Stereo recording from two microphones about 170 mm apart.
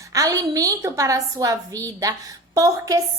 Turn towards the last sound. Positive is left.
turn(degrees=-20)  # may be behind; listen again after turning